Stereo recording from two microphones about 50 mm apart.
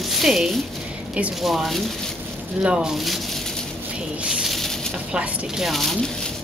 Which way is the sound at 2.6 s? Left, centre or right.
Centre.